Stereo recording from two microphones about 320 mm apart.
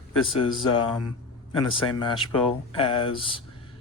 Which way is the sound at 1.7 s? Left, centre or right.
Centre.